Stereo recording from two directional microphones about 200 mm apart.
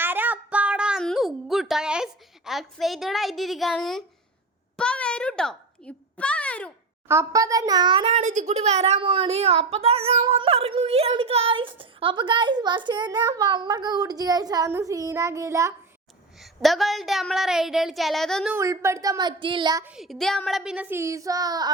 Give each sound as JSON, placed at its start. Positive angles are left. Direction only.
{"t": 0.0, "sound": "a sound", "side_deg": -10}
{"t": 7.1, "sound": "a child's voice", "side_deg": -15}
{"t": 16.4, "sound": "a woman's voice", "side_deg": 0}
{"t": 18.5, "sound": "a woman's voice", "side_deg": -15}
{"t": 19.8, "sound": "a woman's voice", "side_deg": -5}